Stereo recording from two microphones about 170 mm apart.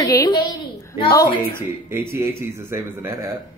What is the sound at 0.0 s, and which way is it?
A woman's voice, 20° left (ahead or behind).